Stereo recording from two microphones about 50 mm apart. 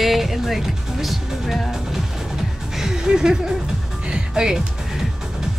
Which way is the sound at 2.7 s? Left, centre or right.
Centre.